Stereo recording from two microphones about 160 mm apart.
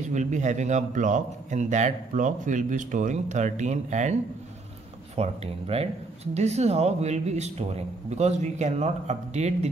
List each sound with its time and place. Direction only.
0.1 s a man's voice: 50° right (ahead or behind)